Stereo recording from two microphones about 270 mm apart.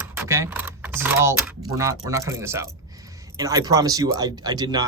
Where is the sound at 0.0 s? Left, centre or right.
Centre.